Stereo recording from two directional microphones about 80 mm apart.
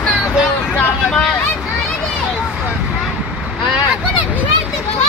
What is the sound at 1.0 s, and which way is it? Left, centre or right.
Vehicle, centre.